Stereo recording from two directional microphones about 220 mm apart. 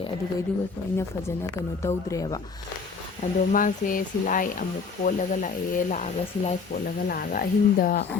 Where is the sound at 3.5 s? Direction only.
40° left (ahead or behind).